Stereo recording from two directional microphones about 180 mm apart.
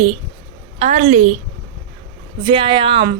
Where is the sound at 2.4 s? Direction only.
30° right (ahead or behind).